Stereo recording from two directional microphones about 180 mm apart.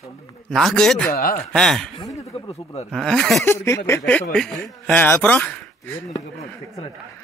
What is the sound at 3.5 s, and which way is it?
A man's voice, 15° left (ahead or behind).